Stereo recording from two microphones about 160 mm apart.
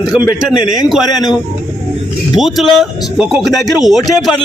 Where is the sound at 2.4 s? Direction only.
Centre (ahead or behind).